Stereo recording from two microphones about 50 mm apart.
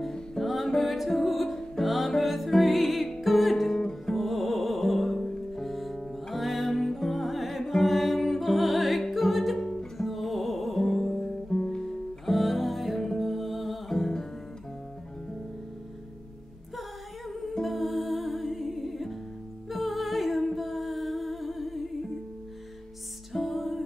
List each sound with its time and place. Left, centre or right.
0.0 s music: centre
9.6 s music: centre
9.9 s music: centre
11.4 s music: centre
12.3 s music: centre
17.3 s music: centre
23.3 s music: centre